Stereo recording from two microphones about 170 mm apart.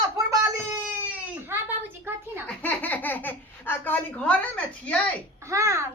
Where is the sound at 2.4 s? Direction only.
10° left (ahead or behind).